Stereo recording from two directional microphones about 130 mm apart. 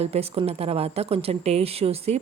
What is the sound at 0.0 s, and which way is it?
Speech, 50° right (ahead or behind).